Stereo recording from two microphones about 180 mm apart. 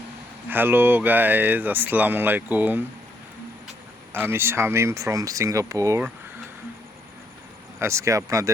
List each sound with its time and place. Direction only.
0.4 s speech: 10° right (ahead or behind)
4.1 s speech: 15° right (ahead or behind)
7.8 s speech: 15° right (ahead or behind)